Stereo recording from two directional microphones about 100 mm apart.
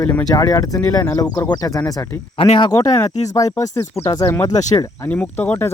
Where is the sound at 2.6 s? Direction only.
35° left (ahead or behind); by 5.7 s 15° left (ahead or behind).